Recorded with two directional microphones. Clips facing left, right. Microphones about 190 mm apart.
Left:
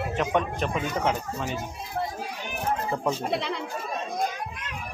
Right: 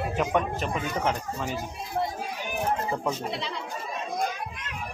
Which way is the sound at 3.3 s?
55° left (ahead or behind).